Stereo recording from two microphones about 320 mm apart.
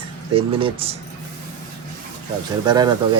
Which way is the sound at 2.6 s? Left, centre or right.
Centre.